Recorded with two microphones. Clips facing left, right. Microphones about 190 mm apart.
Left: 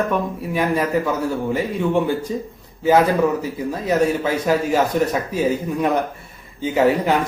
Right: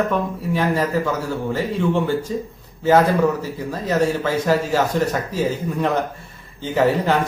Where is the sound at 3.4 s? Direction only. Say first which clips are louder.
Left 2 dB; 15° left (ahead or behind).